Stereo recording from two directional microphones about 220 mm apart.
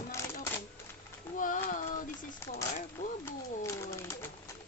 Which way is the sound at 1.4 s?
35° left (ahead or behind).